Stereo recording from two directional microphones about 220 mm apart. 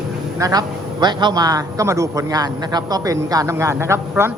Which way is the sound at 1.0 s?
20° right (ahead or behind).